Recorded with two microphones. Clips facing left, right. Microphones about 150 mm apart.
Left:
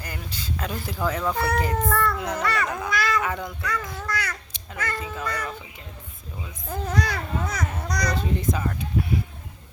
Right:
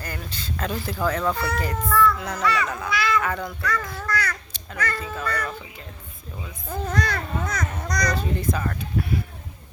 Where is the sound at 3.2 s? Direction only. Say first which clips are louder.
Right 2 dB; 20° left (ahead or behind).